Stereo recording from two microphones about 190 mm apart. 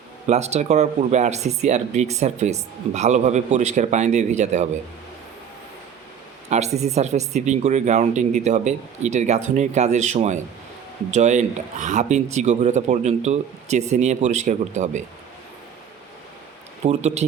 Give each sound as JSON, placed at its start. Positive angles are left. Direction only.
{"t": 0.3, "sound": "speech", "side_deg": -35}
{"t": 6.5, "sound": "speech", "side_deg": -35}
{"t": 16.8, "sound": "speech", "side_deg": -35}